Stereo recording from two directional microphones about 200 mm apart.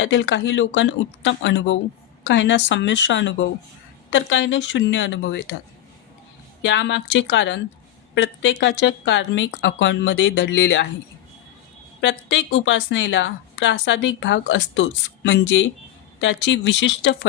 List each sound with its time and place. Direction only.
0.0 s a woman's voice: 65° left (ahead or behind)
6.6 s a woman's voice: 65° left (ahead or behind)
11.9 s a woman's voice: 65° left (ahead or behind)